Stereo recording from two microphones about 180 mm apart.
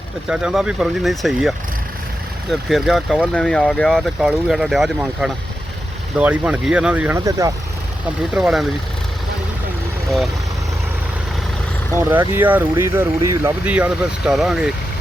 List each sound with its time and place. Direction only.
0.3 s speech: 5° right (ahead or behind)
7.3 s speech: 20° right (ahead or behind)
8.3 s speech: 5° right (ahead or behind)
11.9 s speech: 15° right (ahead or behind)